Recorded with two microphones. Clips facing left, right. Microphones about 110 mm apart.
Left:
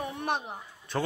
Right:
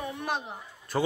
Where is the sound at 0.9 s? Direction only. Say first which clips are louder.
Right 3 dB; 5° right (ahead or behind).